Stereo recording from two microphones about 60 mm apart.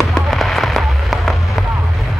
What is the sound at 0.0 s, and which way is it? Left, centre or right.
Fireworks, centre.